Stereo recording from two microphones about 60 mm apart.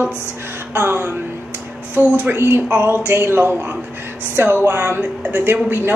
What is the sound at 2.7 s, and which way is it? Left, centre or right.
A woman's voice, right.